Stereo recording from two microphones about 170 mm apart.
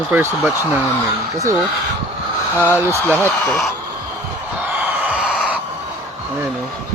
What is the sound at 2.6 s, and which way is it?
Speech, 15° right (ahead or behind).